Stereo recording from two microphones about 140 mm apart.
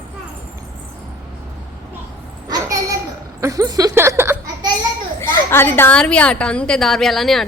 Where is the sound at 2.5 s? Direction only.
25° right (ahead or behind).